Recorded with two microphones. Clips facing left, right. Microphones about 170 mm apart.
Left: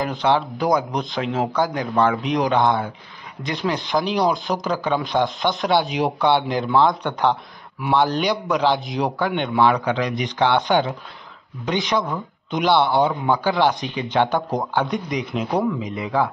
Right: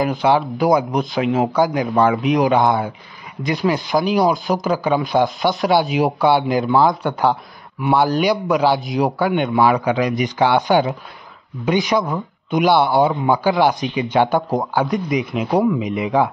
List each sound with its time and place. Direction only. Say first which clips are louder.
0.0 s a man's voice: right 3 dB; 5° right (ahead or behind)
15.5 s speech: right 6 dB; 15° right (ahead or behind)